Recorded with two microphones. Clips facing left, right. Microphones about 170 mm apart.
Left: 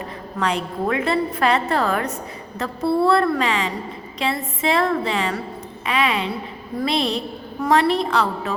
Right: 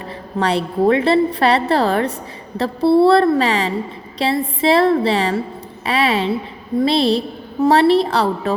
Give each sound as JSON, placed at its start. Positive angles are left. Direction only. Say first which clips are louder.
{"t": 0.3, "sound": "a woman's voice", "louder": "right 6 dB", "side_deg": -30}